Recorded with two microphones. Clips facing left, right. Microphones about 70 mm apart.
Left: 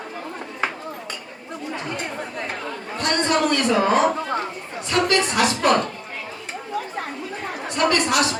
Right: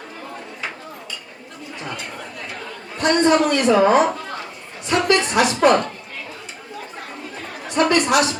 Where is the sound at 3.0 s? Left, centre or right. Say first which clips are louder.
Right 5 dB; right.